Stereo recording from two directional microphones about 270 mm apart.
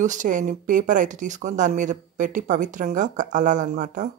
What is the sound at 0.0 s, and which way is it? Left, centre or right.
A woman's voice, right.